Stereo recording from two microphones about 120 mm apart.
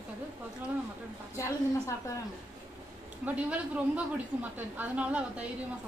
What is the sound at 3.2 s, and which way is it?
A woman's voice, 10° right (ahead or behind).